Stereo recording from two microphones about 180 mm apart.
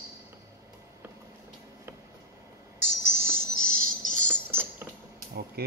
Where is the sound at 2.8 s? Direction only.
85° left.